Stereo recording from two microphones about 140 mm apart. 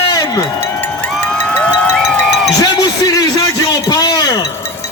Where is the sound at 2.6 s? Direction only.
25° left (ahead or behind).